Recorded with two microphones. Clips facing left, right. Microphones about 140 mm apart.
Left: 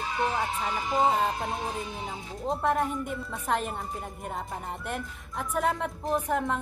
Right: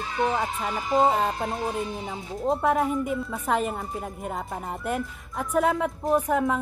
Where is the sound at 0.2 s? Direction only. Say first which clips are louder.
Right 4 dB; 20° right (ahead or behind).